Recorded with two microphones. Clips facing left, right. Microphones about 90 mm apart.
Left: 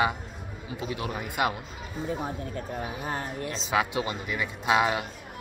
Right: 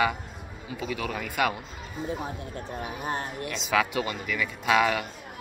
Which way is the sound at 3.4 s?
30° left (ahead or behind).